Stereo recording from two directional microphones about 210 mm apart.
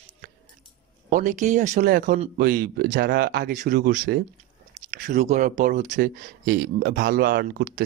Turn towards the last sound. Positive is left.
turn(degrees=-50)  # may be behind; listen again after turning